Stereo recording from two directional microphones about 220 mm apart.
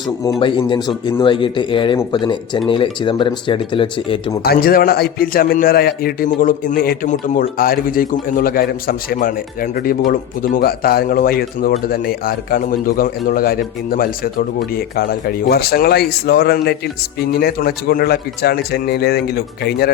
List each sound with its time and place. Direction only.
0.3 s speech: 25° left (ahead or behind)
4.4 s a man's voice: 40° left (ahead or behind)